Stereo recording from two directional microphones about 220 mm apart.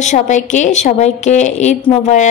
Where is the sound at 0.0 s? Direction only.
35° left (ahead or behind).